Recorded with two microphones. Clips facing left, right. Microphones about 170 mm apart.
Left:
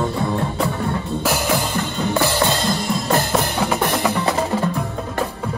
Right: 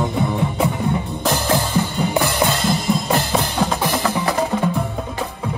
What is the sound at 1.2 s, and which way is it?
Music, 5° left (ahead or behind).